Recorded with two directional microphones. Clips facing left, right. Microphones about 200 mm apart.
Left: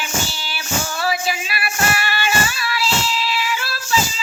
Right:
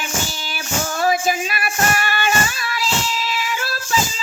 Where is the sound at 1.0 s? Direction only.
45° right (ahead or behind).